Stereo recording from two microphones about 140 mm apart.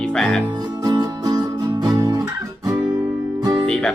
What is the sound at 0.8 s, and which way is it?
Music, 30° right (ahead or behind).